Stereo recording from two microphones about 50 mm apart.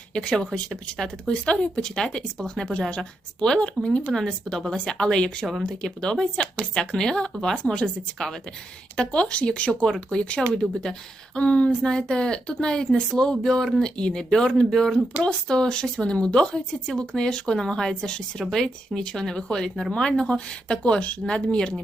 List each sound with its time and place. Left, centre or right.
0.1 s speech: centre
9.8 s speech: centre